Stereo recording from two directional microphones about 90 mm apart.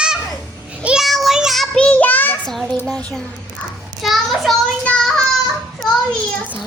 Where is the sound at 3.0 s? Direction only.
15° left (ahead or behind).